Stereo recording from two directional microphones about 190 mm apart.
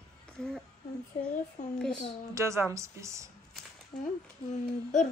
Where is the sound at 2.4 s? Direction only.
15° right (ahead or behind).